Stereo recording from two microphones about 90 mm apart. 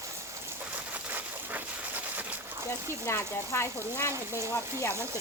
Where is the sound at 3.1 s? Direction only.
30° left (ahead or behind).